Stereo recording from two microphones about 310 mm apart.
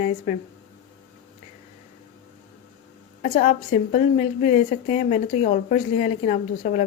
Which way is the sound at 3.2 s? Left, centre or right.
Left.